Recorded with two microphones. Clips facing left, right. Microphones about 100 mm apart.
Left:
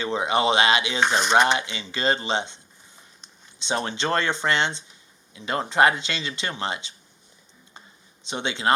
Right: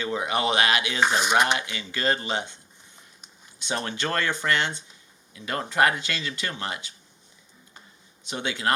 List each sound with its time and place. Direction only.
0.0 s speech: 25° left (ahead or behind)
1.0 s speech: 5° right (ahead or behind)
1.5 s speech: 25° left (ahead or behind)
3.6 s speech: 25° left (ahead or behind)
8.2 s speech: 25° left (ahead or behind)